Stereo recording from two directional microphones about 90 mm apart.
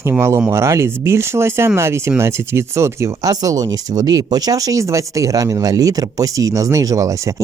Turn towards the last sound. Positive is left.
turn(degrees=-40)  # may be behind; listen again after turning